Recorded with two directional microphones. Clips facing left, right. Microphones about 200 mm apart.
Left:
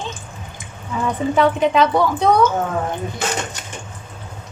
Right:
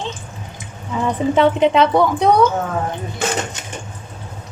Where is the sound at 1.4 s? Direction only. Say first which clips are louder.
Right 2 dB; 25° right (ahead or behind).